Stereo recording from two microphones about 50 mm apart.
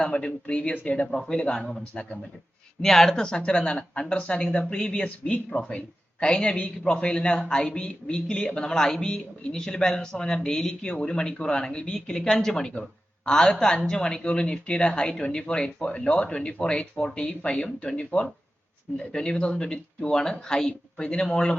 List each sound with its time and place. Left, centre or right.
0.0 s speech: centre
1.0 s speech: centre
2.8 s speech: centre